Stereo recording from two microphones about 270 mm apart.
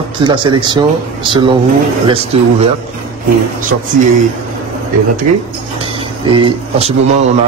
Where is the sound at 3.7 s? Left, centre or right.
Right.